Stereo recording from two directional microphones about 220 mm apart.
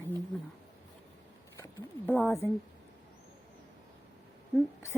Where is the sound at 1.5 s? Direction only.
10° left (ahead or behind).